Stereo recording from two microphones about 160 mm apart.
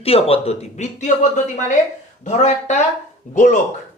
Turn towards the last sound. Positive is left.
turn(degrees=50)  # may be behind; listen again after turning